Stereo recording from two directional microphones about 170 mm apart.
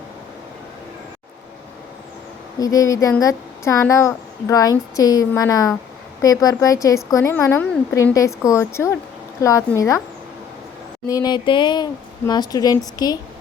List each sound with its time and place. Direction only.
2.6 s speech: 20° left (ahead or behind)
11.1 s speech: 25° left (ahead or behind)